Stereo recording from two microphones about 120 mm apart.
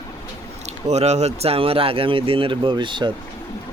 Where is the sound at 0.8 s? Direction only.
70° right (ahead or behind); by 3.1 s 40° right (ahead or behind).